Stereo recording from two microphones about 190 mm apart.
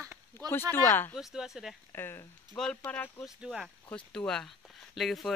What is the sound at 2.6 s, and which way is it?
Speech, 5° left (ahead or behind).